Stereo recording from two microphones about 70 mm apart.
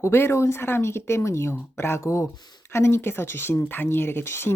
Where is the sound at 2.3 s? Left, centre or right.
Left.